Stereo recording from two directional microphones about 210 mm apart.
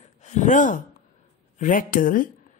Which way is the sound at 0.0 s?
35° left (ahead or behind).